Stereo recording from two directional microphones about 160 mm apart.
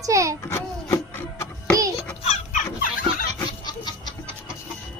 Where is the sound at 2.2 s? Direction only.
50° left (ahead or behind).